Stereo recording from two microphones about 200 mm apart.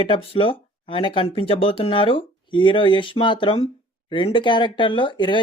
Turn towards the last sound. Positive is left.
turn(degrees=25)  # may be behind; listen again after turning